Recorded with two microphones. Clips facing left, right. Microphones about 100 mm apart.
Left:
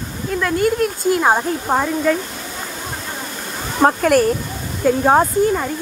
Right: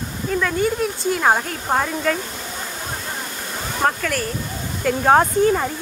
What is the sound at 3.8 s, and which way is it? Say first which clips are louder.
Speech: left 6 dB; 20° left (ahead or behind).